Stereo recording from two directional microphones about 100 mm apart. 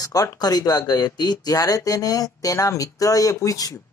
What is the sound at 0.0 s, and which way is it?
Speech, 35° left (ahead or behind).